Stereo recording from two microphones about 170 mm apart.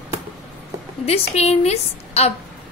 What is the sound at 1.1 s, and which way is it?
A woman's voice, 40° left (ahead or behind).